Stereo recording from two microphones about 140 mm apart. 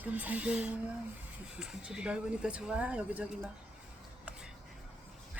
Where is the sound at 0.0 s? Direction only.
10° right (ahead or behind).